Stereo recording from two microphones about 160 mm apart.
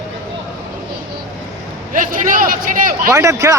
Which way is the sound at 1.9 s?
55° right (ahead or behind).